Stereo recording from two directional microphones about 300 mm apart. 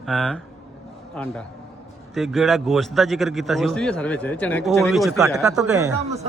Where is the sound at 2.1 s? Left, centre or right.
Centre.